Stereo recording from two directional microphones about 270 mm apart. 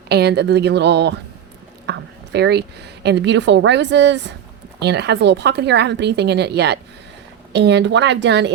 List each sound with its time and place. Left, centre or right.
0.1 s a woman's voice: right